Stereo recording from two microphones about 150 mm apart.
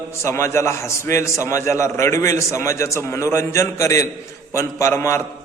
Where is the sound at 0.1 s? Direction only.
20° left (ahead or behind).